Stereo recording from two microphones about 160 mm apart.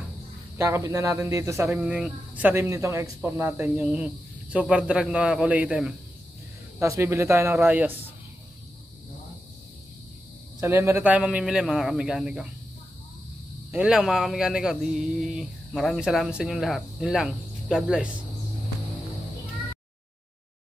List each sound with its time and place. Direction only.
0.6 s speech: 15° right (ahead or behind)
6.8 s speech: 15° right (ahead or behind)
10.6 s speech: 15° right (ahead or behind)
13.7 s speech: 5° right (ahead or behind)